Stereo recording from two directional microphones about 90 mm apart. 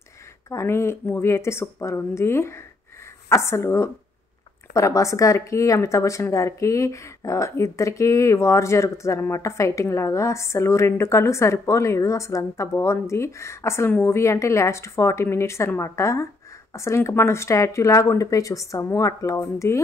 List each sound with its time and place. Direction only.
0.5 s a woman's voice: 30° left (ahead or behind)